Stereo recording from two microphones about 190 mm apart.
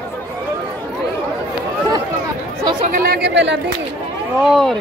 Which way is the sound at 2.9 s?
50° right (ahead or behind).